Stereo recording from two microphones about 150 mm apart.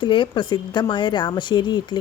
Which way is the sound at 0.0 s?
30° left (ahead or behind).